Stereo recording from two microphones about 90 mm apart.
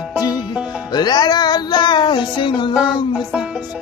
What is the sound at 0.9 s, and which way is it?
Music, 55° left (ahead or behind).